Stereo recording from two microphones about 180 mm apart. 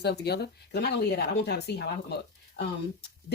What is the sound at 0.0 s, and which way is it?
A woman's voice, 65° left (ahead or behind).